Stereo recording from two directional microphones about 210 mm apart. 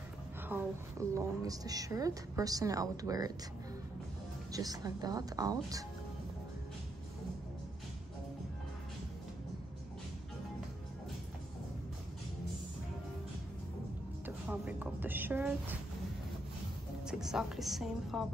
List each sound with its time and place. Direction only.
0.5 s a woman's voice: 10° right (ahead or behind)
4.5 s a woman's voice: 15° right (ahead or behind)
14.2 s a woman's voice: 5° right (ahead or behind)
17.1 s a woman's voice: 5° right (ahead or behind)